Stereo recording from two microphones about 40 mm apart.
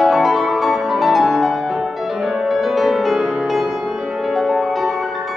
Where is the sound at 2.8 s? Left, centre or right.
Centre.